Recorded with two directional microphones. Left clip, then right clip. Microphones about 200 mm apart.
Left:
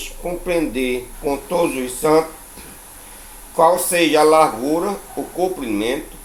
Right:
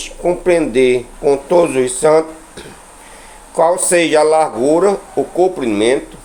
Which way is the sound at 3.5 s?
25° right (ahead or behind).